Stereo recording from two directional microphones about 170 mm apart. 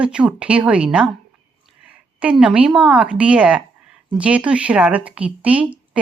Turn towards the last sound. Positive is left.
turn(degrees=-10)  # may be behind; listen again after turning